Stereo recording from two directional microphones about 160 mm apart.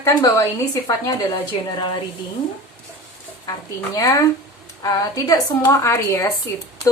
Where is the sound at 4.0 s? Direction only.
20° left (ahead or behind).